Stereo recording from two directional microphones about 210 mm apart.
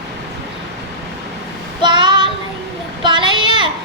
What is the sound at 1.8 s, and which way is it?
Child singing, 20° right (ahead or behind).